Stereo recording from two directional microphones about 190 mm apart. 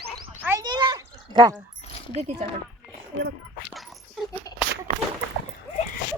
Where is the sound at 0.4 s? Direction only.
20° right (ahead or behind).